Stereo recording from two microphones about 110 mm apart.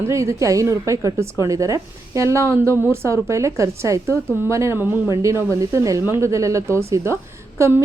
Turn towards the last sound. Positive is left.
turn(degrees=-25)  # may be behind; listen again after turning